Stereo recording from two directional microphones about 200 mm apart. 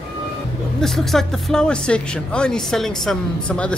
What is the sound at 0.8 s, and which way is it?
Speech, centre (ahead or behind).